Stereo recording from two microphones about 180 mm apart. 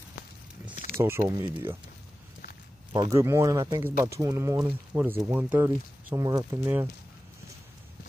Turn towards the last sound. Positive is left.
turn(degrees=-10)  # may be behind; listen again after turning